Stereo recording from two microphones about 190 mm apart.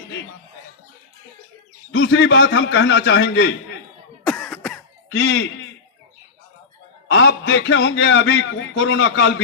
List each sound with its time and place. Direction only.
1.9 s a man's voice: 70° left (ahead or behind)
4.3 s cough: 5° left (ahead or behind)
5.1 s a man's voice: 70° left (ahead or behind)
7.1 s a man's voice: 75° left (ahead or behind)